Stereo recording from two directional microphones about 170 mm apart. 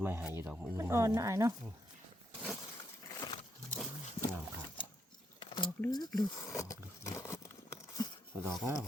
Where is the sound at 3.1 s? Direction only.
25° left (ahead or behind).